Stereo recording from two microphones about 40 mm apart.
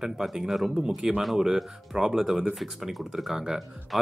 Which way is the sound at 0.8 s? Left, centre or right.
Right.